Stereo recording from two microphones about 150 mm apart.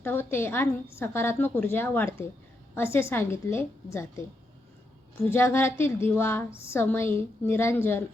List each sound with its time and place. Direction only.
0.0 s a woman's voice: 15° left (ahead or behind)
5.2 s a woman's voice: 15° left (ahead or behind)